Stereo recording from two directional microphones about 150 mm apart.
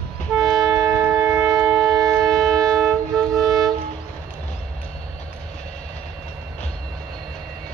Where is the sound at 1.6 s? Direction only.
5° right (ahead or behind).